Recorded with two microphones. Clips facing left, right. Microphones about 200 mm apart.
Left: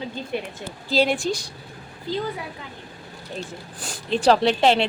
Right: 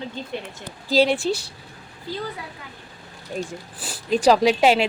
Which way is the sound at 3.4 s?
10° right (ahead or behind).